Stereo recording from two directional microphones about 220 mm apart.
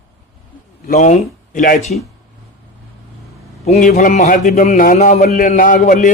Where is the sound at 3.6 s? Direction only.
35° left (ahead or behind).